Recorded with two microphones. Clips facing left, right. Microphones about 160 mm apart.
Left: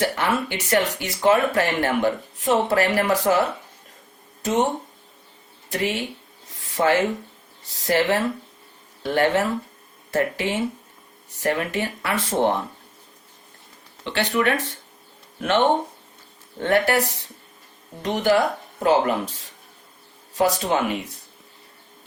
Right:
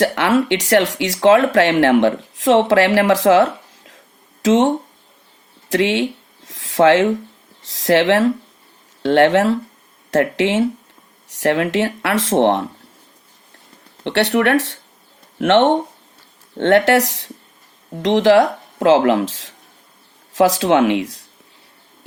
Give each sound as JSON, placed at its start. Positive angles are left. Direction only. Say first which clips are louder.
{"t": 0.0, "sound": "speech", "louder": "right 7 dB", "side_deg": -85}
{"t": 14.0, "sound": "speech", "louder": "right 6 dB", "side_deg": -70}